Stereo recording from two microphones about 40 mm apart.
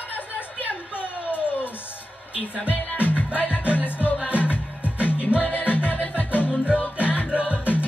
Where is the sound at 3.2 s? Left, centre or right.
Left.